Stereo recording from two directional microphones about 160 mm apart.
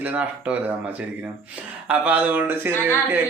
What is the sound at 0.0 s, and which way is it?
Speech, 10° right (ahead or behind).